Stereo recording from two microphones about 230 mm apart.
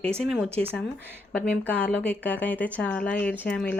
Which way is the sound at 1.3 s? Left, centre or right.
Centre.